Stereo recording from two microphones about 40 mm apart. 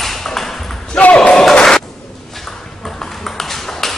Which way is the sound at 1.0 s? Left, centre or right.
Left.